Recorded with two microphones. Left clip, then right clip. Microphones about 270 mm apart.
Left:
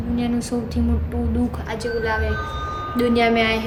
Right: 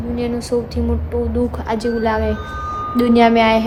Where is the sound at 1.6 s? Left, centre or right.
Centre.